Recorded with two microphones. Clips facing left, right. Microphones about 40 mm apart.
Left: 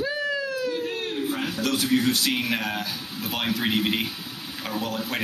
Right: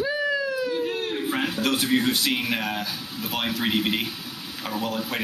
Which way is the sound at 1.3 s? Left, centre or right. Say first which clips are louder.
Right 3 dB; right.